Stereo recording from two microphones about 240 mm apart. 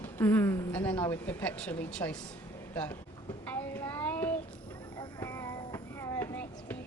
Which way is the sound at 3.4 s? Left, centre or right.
Centre.